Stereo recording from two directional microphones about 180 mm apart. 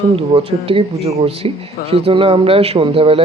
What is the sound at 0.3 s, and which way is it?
Speech, 30° right (ahead or behind).